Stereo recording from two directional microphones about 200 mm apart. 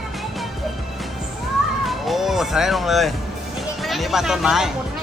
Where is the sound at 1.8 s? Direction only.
Centre (ahead or behind).